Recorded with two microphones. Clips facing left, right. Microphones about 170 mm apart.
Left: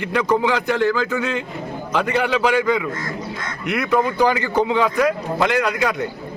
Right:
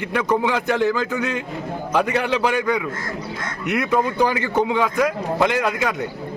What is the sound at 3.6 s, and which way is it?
A man's voice, 20° right (ahead or behind).